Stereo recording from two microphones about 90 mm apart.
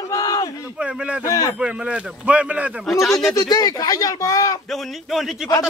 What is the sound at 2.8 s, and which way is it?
Speech, centre (ahead or behind).